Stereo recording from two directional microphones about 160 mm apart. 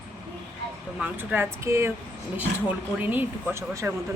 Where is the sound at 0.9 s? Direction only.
10° right (ahead or behind).